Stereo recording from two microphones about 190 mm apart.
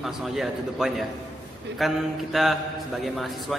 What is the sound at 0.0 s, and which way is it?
A man's voice, centre (ahead or behind).